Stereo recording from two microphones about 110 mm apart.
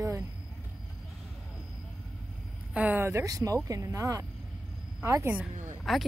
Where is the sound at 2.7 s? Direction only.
15° right (ahead or behind).